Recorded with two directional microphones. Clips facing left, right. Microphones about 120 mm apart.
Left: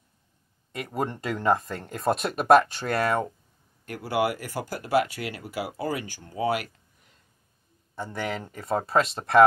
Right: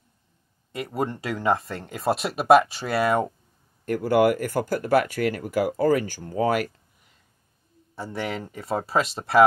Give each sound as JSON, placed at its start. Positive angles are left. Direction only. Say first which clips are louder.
{"t": 0.7, "sound": "speech", "louder": "right 2 dB", "side_deg": 0}
{"t": 3.8, "sound": "speech", "louder": "right 7 dB", "side_deg": -45}
{"t": 7.9, "sound": "speech", "louder": "right 1 dB", "side_deg": -5}